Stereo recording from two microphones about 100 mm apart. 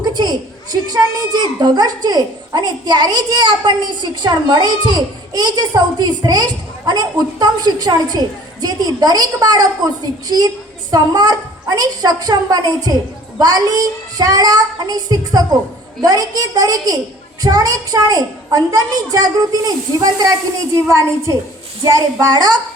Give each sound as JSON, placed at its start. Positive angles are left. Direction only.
{"t": 0.2, "sound": "a woman's voice", "side_deg": -45}
{"t": 21.8, "sound": "a child's voice", "side_deg": -30}